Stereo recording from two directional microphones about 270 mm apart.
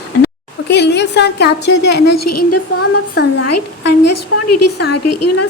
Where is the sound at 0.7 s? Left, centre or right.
Left.